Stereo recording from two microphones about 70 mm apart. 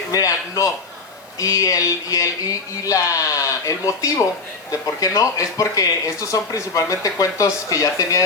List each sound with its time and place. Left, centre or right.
0.1 s speech: left